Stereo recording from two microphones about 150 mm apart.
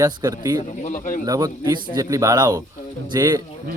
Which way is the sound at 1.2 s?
25° right (ahead or behind).